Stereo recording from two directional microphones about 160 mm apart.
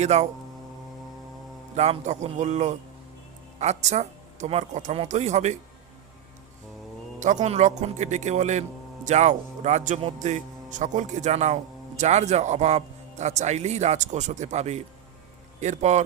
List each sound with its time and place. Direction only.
0.0 s speech: 45° right (ahead or behind)
1.7 s speech: 45° right (ahead or behind)
7.2 s speech: 50° right (ahead or behind)